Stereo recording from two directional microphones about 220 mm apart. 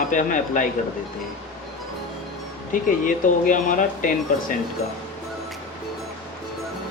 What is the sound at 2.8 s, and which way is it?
Speech, 35° left (ahead or behind).